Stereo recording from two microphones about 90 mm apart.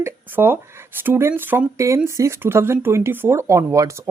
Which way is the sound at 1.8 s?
30° right (ahead or behind).